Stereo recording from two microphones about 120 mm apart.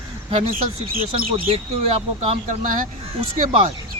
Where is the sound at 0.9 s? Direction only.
55° right (ahead or behind).